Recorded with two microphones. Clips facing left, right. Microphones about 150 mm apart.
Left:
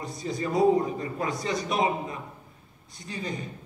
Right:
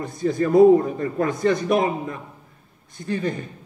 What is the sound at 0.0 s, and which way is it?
A man's voice, 55° right (ahead or behind).